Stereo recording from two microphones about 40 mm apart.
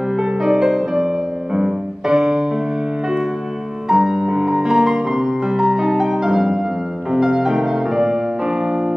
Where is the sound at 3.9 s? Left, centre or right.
Centre.